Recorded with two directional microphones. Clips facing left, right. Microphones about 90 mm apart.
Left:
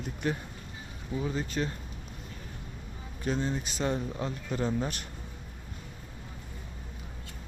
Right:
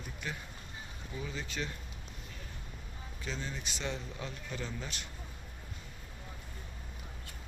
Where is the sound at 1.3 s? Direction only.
40° left (ahead or behind).